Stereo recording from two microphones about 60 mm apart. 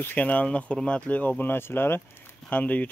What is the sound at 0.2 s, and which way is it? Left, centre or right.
Speech, left.